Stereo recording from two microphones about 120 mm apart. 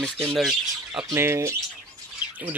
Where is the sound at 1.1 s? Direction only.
20° right (ahead or behind).